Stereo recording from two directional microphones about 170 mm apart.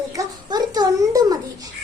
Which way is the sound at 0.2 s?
25° right (ahead or behind).